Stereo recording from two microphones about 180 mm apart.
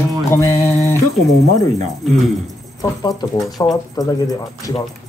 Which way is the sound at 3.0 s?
20° left (ahead or behind).